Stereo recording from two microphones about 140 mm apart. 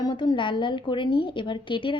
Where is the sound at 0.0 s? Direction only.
30° left (ahead or behind).